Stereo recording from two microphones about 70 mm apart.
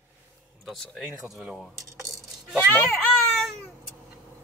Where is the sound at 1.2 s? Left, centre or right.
Centre.